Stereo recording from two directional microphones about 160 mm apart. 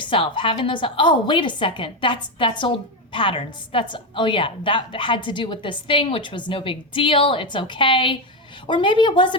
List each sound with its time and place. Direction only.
0.0 s a woman's voice: 30° left (ahead or behind)